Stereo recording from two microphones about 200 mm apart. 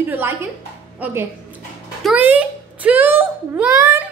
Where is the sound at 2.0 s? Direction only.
5° right (ahead or behind).